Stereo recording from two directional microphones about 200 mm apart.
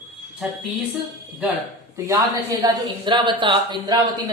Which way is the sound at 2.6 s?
20° right (ahead or behind).